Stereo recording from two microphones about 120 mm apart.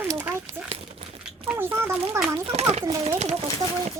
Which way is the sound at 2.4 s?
60° right (ahead or behind).